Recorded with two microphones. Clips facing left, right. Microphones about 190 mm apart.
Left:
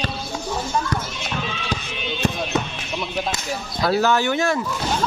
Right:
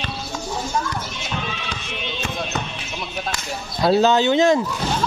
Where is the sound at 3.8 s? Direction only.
20° right (ahead or behind).